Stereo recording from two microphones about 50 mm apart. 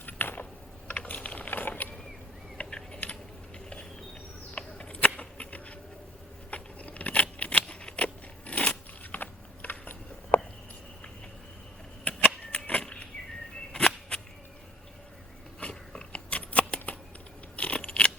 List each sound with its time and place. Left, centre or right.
0.0 s gears: left
0.9 s mechanisms: left
2.6 s mechanisms: centre
4.5 s a sound: left
6.5 s scissors: left
12.0 s vehicle: left
13.7 s a sound: centre
15.6 s scissors: left